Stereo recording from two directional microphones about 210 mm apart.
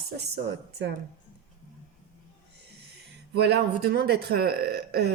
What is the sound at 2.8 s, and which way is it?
Speech, 50° right (ahead or behind).